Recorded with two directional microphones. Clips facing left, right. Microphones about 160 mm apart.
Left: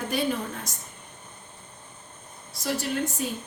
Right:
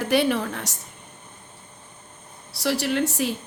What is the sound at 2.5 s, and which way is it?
Speech, 75° right (ahead or behind).